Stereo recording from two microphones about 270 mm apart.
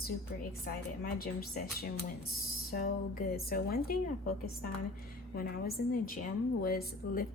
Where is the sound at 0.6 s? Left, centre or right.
Left.